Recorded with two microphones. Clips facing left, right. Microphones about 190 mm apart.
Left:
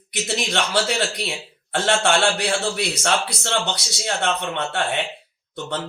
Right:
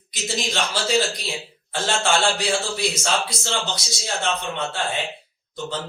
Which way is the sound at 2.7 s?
65° left (ahead or behind).